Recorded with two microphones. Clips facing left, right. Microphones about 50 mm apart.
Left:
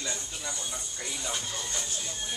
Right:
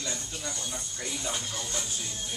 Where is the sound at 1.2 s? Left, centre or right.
Centre.